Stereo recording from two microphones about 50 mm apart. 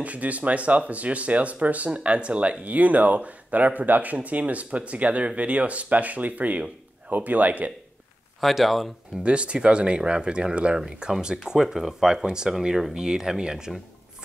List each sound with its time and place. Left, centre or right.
0.0 s speech: right
8.4 s speech: centre
9.2 s speech: right